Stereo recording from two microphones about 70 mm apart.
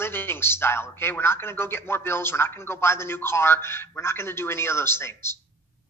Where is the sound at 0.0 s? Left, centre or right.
Left.